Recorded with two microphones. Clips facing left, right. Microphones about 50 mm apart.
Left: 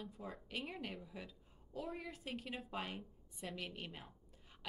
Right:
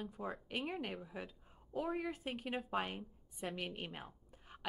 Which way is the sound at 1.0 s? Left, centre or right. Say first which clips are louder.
Right 4 dB; right.